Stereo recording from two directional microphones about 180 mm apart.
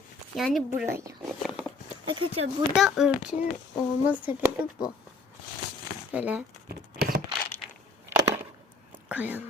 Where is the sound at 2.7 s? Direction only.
Centre (ahead or behind).